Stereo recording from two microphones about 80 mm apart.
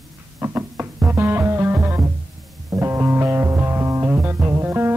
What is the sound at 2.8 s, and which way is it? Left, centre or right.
Music, right.